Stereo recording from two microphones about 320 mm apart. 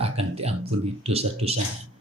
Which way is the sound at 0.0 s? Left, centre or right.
Centre.